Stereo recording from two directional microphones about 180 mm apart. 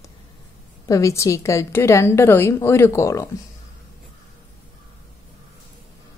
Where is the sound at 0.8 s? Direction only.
15° left (ahead or behind).